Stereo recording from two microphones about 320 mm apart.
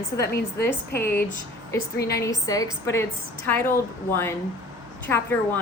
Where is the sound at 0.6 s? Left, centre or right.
Left.